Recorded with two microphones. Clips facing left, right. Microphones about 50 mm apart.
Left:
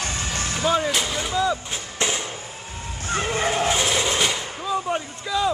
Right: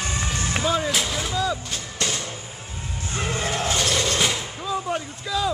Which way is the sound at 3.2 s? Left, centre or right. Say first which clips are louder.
Left 2 dB; left.